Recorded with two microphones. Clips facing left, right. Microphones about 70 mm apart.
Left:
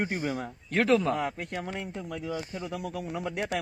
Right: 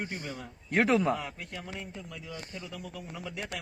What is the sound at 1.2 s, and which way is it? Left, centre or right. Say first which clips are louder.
A man's voice: left 8 dB; left.